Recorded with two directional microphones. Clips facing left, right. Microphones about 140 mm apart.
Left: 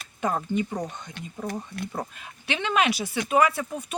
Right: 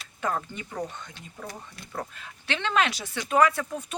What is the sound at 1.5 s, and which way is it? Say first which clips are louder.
Speech: left 10 dB; 60° left (ahead or behind).